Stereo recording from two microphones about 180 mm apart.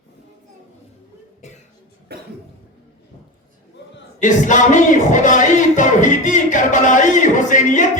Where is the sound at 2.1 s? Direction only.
65° right (ahead or behind).